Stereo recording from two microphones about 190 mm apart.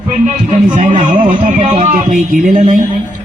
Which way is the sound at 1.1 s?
40° right (ahead or behind).